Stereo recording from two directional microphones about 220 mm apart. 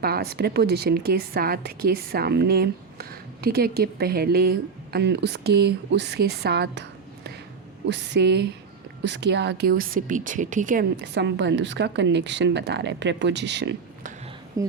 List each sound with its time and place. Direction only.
0.0 s speech: 45° right (ahead or behind)
7.9 s speech: 50° right (ahead or behind); by 10.8 s 35° right (ahead or behind)
11.0 s speech: 50° right (ahead or behind)
14.6 s speech: 15° right (ahead or behind)